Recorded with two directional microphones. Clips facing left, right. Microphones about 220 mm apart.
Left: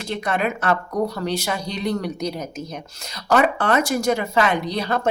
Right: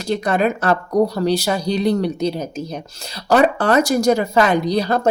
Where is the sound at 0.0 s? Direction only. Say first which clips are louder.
Right 5 dB; 40° right (ahead or behind).